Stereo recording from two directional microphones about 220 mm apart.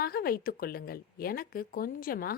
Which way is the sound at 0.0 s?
45° left (ahead or behind).